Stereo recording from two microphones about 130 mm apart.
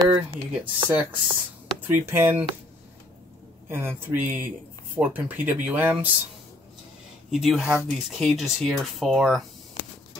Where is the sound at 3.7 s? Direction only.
20° right (ahead or behind).